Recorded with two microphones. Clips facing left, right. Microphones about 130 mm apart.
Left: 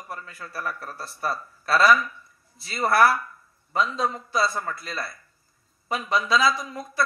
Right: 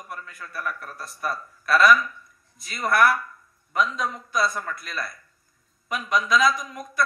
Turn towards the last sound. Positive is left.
turn(degrees=30)  # may be behind; listen again after turning